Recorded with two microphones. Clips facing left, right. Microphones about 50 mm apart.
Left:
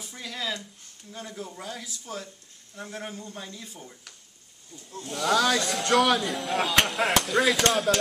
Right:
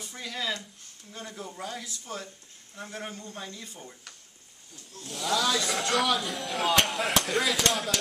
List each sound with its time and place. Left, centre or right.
0.0 s speech: centre
4.9 s speech: left
5.2 s speech: left
5.7 s speech: centre